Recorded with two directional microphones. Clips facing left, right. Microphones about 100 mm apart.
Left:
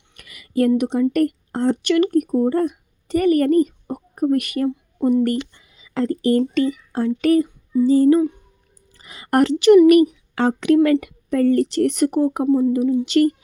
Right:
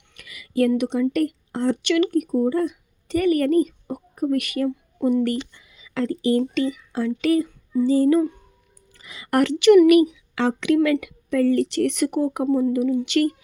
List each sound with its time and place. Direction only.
0.2 s a sound: 45° left (ahead or behind)
0.8 s speech: 35° left (ahead or behind)
12.5 s speech: 20° left (ahead or behind)
12.7 s speech: 30° left (ahead or behind)